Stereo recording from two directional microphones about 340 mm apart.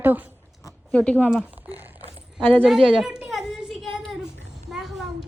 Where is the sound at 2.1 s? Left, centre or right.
Centre.